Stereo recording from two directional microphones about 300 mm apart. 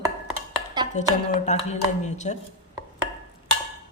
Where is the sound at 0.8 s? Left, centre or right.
Centre.